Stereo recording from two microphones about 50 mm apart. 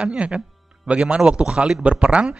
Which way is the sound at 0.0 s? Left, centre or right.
Right.